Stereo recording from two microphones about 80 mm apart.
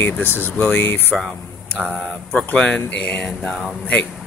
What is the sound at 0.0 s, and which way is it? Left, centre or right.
Speech, left.